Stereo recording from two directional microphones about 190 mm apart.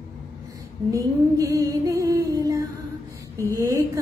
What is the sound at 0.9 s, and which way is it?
Female singing, 15° right (ahead or behind).